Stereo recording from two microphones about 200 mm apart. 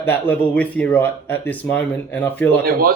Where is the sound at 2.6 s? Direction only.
45° right (ahead or behind).